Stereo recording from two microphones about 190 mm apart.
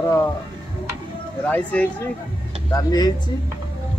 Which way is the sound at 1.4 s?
10° left (ahead or behind).